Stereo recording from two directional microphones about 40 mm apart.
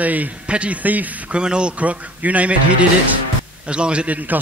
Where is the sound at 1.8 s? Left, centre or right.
Right.